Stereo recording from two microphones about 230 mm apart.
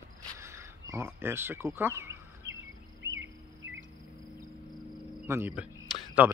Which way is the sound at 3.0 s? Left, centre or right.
Right.